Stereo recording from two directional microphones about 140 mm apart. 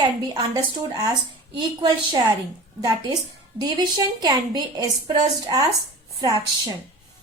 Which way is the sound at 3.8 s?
30° right (ahead or behind).